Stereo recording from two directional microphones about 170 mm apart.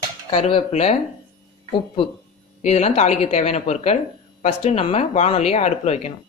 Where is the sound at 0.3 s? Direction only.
35° left (ahead or behind).